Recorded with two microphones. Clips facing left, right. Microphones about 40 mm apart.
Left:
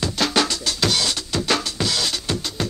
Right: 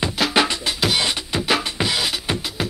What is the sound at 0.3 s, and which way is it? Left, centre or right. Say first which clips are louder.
Music: right 2 dB; right.